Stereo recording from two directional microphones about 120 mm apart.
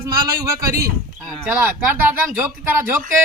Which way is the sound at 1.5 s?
15° right (ahead or behind).